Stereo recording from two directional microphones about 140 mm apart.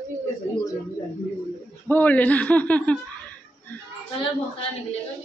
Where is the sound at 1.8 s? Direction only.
15° left (ahead or behind).